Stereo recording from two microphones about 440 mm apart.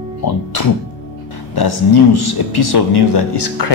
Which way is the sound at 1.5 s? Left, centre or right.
Left.